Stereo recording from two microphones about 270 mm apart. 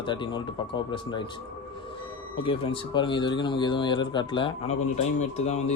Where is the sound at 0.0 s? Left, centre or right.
Centre.